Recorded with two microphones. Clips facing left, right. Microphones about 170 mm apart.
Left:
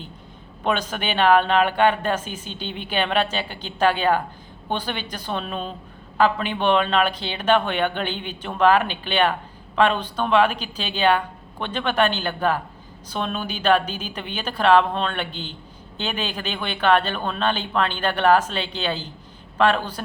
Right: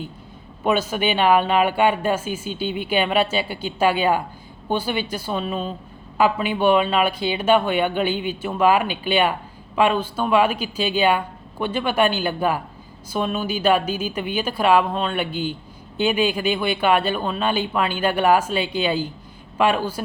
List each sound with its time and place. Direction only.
0.6 s speech: 10° right (ahead or behind)